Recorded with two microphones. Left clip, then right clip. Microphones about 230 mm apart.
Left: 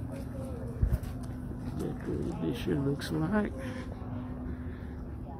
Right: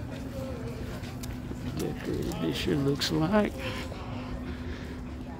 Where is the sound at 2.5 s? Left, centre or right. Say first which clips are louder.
Right 5 dB; centre.